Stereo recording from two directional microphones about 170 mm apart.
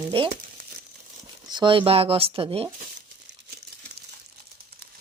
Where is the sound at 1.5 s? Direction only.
25° right (ahead or behind).